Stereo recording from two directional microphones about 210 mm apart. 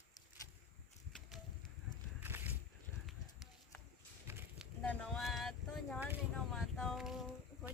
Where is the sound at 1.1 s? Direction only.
5° left (ahead or behind).